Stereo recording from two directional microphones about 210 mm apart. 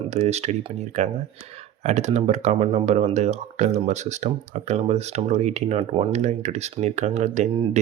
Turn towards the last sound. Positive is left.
turn(degrees=-35)  # may be behind; listen again after turning